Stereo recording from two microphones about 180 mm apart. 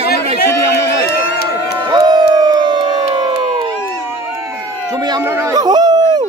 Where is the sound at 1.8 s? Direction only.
25° right (ahead or behind).